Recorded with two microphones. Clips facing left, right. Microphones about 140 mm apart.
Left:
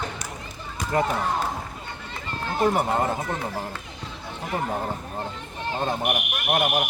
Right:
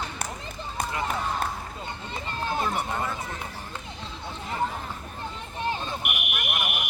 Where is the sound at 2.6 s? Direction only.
45° left (ahead or behind).